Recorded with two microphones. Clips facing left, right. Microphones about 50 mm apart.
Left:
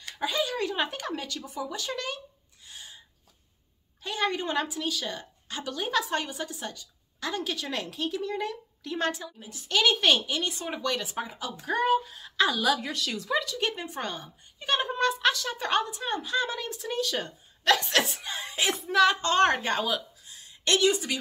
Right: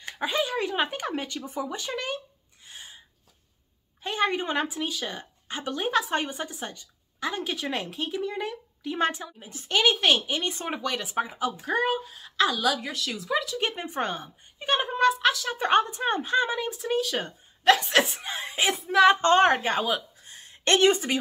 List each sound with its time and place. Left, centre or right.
0.0 s a woman's voice: right
2.6 s a sound: right
4.0 s a woman's voice: right
9.9 s speech: centre
10.2 s a woman's voice: right
10.8 s speech: centre
11.5 s a woman's voice: centre
13.6 s speech: right; by 15.5 s centre
15.5 s a woman's voice: right
15.8 s a woman's voice: right
16.4 s speech: centre
20.2 s a sound: right